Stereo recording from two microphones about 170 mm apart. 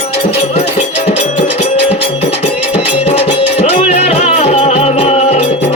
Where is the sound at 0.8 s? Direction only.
45° left (ahead or behind).